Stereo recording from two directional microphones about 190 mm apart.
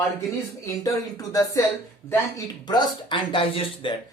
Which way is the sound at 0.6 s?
15° left (ahead or behind).